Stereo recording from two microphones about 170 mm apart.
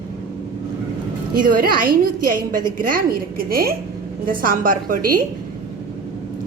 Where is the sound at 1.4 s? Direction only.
55° right (ahead or behind).